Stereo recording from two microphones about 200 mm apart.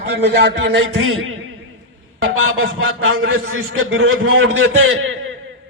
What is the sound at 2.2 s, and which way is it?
Music, 90° right.